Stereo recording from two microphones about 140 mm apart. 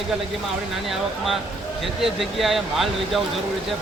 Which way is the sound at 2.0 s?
Centre (ahead or behind).